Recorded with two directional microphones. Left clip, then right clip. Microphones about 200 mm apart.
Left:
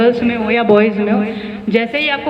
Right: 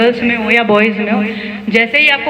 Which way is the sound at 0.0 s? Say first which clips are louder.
Right 1 dB; 60° left (ahead or behind).